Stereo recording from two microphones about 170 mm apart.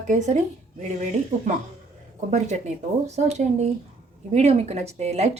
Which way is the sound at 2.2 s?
40° right (ahead or behind).